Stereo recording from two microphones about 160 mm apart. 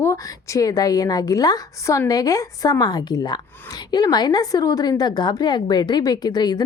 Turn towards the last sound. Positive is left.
turn(degrees=25)  # may be behind; listen again after turning